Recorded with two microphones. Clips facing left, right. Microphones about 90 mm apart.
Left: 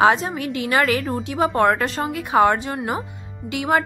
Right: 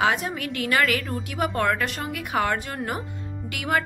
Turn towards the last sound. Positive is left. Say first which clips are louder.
# left 5 dB
turn(degrees=25)  # may be behind; listen again after turning